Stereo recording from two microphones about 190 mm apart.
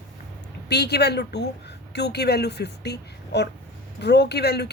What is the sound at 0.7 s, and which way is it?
Speech, 60° left (ahead or behind).